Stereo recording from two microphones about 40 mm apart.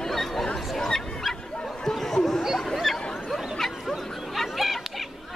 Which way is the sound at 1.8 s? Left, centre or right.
Centre.